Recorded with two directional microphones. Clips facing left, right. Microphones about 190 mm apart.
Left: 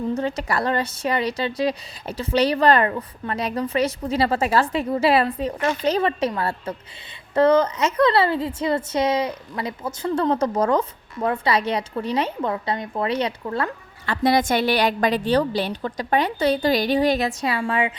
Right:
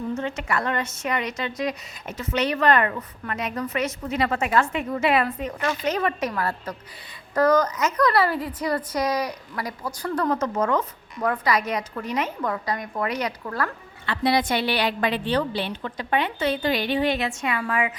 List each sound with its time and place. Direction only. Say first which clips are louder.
0.1 s a woman's voice: left 3 dB; 35° left (ahead or behind)
14.1 s speech: left 3 dB; 45° left (ahead or behind); by 17.9 s 25° left (ahead or behind)